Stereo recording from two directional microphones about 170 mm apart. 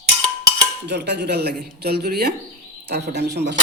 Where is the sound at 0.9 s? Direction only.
80° right.